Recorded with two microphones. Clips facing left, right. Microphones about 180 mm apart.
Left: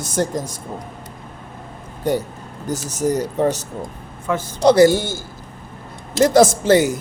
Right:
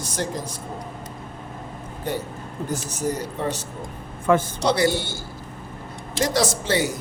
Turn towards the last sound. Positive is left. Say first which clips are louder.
# left 8 dB
turn(degrees=50)  # may be behind; listen again after turning